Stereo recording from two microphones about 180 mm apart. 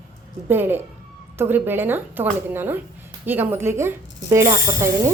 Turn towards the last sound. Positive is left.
turn(degrees=-15)  # may be behind; listen again after turning